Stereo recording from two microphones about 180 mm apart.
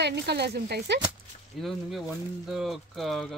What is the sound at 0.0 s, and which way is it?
Speech, 65° right (ahead or behind).